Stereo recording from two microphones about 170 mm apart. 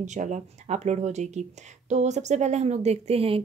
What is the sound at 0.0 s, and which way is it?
A woman's voice, 45° right (ahead or behind).